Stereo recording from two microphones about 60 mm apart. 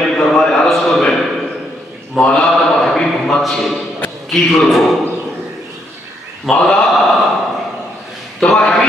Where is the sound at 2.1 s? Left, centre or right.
Centre.